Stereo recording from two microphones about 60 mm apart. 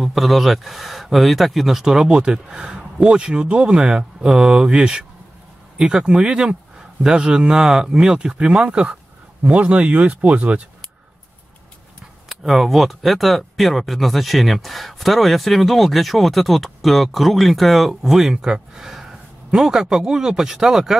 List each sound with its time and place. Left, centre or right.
0.0 s speech: centre; by 10.6 s right
12.3 s speech: centre